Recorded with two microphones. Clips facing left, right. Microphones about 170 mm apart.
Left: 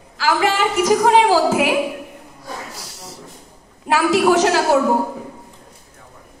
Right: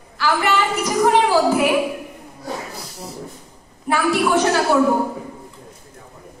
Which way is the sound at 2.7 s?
80° left.